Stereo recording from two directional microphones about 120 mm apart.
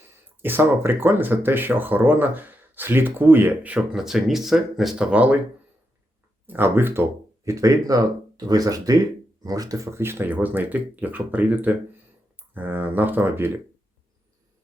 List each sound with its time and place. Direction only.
0.4 s speech: 20° right (ahead or behind)
6.4 s speech: 15° right (ahead or behind)